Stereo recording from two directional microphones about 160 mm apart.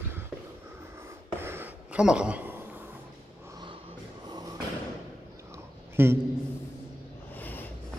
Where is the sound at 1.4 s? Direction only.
15° right (ahead or behind).